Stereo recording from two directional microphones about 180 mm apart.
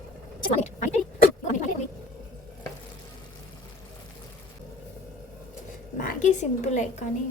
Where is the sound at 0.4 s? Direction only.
45° left (ahead or behind).